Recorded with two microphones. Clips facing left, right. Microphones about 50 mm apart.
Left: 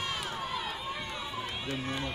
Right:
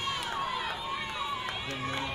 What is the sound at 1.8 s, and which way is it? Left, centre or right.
Speech, centre.